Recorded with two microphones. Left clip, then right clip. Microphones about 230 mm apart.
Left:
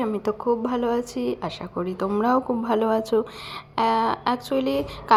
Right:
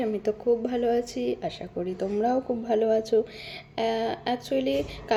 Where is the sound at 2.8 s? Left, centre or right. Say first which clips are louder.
Even; left.